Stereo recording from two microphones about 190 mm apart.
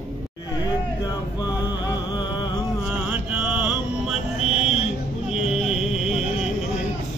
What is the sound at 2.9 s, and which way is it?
Mantra, 10° right (ahead or behind).